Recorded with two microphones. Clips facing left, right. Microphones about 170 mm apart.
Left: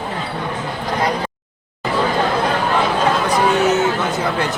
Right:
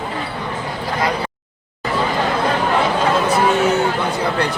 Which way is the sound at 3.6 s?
Centre (ahead or behind).